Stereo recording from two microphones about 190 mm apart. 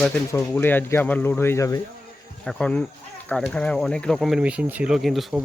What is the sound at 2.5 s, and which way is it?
Speech, 5° left (ahead or behind).